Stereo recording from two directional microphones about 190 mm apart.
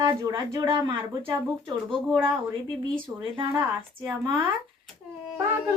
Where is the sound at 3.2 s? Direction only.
25° right (ahead or behind).